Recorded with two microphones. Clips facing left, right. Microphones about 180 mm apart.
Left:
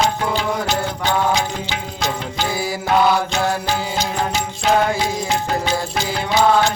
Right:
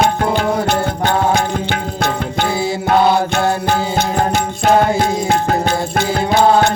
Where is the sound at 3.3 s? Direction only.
60° right (ahead or behind).